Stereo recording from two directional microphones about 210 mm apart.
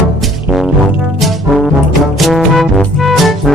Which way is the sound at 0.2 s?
Centre (ahead or behind).